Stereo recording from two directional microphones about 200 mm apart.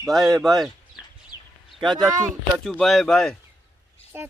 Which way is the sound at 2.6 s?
Centre (ahead or behind).